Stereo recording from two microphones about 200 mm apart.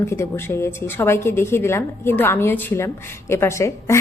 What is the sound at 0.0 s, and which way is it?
A woman's voice, 15° left (ahead or behind).